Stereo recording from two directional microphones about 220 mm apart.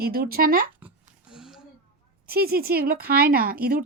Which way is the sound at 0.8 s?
5° right (ahead or behind).